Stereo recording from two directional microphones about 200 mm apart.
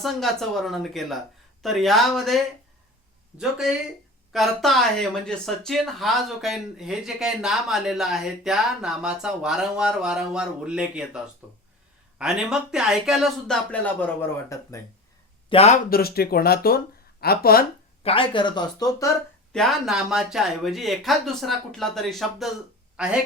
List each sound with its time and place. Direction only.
0.0 s speech: centre (ahead or behind)
15.4 s speech: 30° left (ahead or behind)
15.9 s speech: 50° left (ahead or behind)
18.0 s speech: 25° left (ahead or behind)
19.5 s speech: centre (ahead or behind)